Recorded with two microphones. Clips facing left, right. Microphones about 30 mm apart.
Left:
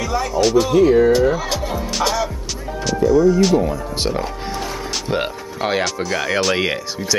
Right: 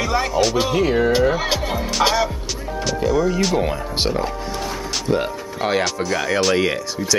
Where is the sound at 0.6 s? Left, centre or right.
Centre.